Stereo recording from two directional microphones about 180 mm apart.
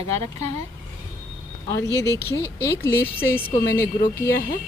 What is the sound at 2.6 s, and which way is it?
Speech, 15° left (ahead or behind).